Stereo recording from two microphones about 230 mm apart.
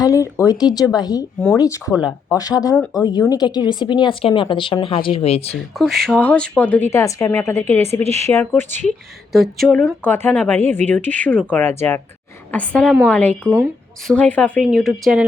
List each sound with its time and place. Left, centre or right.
0.0 s speech: centre
5.7 s speech: centre
8.0 s speech: right
8.3 s speech: centre